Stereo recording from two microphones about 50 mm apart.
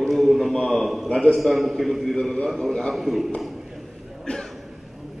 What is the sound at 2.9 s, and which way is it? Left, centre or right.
Speech, centre.